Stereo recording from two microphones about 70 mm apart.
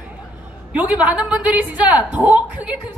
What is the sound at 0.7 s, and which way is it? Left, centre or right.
A woman's voice, right.